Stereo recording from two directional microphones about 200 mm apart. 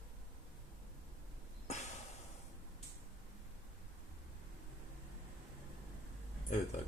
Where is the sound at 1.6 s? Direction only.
35° left (ahead or behind).